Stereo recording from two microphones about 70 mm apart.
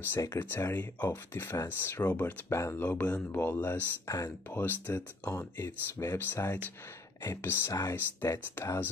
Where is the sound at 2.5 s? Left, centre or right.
Left.